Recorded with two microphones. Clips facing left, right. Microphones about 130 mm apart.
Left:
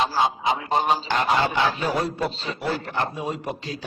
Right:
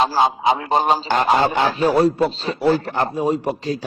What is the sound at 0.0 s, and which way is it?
A man's voice, 40° right (ahead or behind).